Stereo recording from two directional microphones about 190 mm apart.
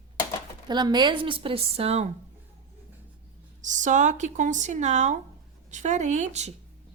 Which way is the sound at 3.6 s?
40° right (ahead or behind).